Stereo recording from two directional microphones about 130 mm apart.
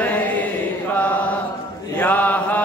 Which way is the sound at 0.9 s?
10° left (ahead or behind).